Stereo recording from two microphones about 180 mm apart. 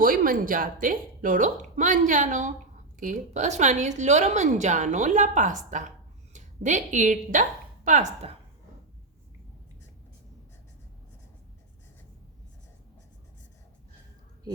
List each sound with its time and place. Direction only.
0.0 s a woman's voice: 50° right (ahead or behind)